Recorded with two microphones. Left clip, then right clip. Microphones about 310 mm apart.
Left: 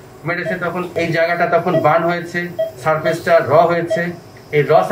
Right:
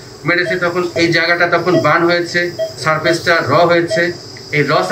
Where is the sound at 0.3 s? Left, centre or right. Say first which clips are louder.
Right 6 dB; centre.